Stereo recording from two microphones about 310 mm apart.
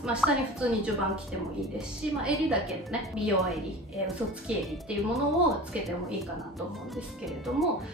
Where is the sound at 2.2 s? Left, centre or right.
Centre.